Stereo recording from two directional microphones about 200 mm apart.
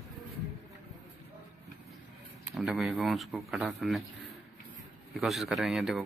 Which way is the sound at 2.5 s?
5° right (ahead or behind).